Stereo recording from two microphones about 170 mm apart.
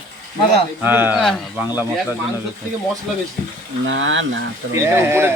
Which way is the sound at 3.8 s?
90° right.